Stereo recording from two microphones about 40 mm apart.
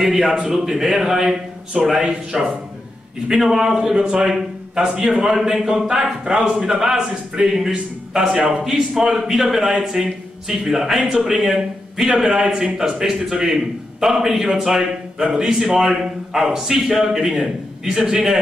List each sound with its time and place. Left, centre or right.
0.0 s a man's voice: centre; by 4.3 s right
4.3 s a man's voice: centre
9.6 s a man's voice: centre